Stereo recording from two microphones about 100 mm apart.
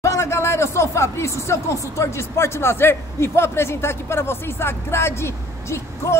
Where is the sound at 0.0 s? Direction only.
30° left (ahead or behind).